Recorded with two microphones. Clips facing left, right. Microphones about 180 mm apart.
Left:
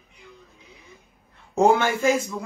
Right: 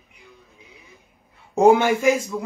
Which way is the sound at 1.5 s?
15° right (ahead or behind).